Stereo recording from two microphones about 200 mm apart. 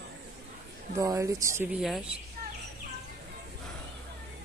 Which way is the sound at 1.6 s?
Centre (ahead or behind).